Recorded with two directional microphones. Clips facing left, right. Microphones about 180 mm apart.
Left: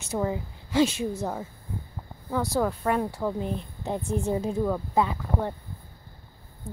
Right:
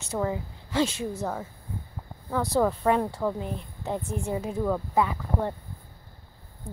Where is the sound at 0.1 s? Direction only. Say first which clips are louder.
Left 1 dB; 15° left (ahead or behind).